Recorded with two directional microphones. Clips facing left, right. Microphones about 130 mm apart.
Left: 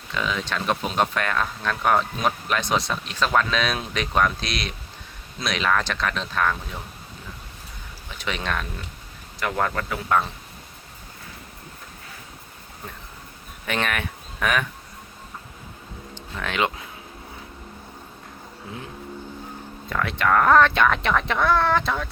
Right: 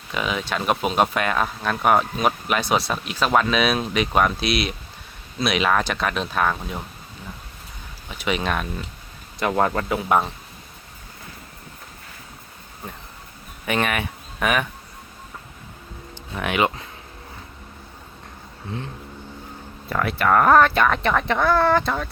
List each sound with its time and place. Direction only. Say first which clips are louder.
0.1 s speech: right 2 dB; 15° right (ahead or behind)
8.2 s speech: right 4 dB; 10° right (ahead or behind)
9.4 s speech: right 4 dB; 25° right (ahead or behind)
13.7 s speech: right 3 dB; 10° right (ahead or behind)
16.1 s speech: right 4 dB; 10° right (ahead or behind)
19.9 s speech: right 2 dB; 5° right (ahead or behind)